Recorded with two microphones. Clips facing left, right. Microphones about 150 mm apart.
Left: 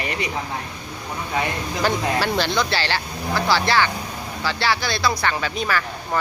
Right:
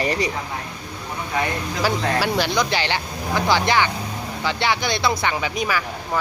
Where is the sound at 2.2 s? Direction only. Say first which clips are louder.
Right 1 dB; 10° right (ahead or behind).